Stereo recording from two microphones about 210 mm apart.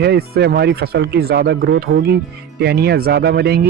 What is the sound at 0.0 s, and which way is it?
Speech, 50° right (ahead or behind).